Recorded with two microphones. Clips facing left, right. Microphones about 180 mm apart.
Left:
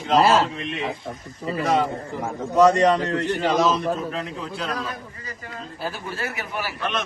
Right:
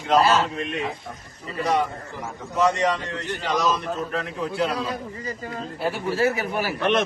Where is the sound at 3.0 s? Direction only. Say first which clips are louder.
Left 7 dB; 65° left (ahead or behind).